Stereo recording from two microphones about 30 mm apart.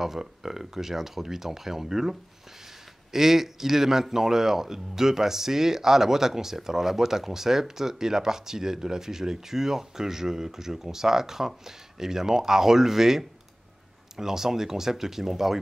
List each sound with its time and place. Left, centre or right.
0.0 s a man's voice: centre